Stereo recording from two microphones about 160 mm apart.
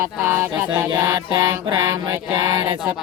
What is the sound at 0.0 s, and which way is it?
Mantra, 15° right (ahead or behind).